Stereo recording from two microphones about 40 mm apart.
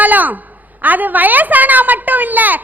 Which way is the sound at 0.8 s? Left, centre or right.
Right.